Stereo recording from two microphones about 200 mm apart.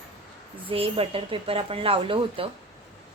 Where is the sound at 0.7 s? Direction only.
30° right (ahead or behind).